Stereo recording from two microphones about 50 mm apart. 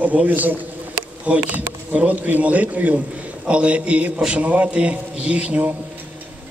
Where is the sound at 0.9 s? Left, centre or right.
Right.